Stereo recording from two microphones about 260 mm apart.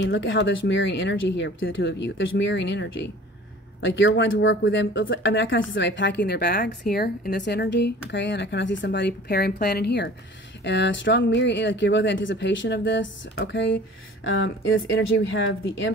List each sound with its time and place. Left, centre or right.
0.1 s a woman's voice: left